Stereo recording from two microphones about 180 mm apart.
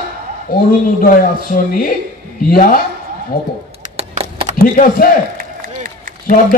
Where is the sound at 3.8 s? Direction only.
35° right (ahead or behind).